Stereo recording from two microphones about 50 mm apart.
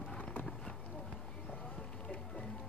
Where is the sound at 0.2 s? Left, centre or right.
Left.